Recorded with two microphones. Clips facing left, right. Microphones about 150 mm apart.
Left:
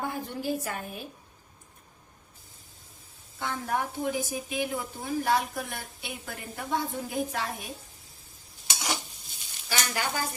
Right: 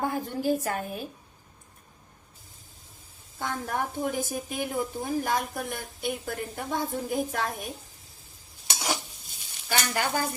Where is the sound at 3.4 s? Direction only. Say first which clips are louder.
Even; 45° right (ahead or behind).